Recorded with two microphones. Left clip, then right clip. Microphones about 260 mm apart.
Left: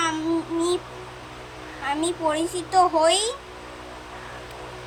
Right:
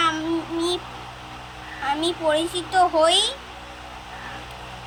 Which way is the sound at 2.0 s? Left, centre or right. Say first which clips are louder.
Right 2 dB; centre.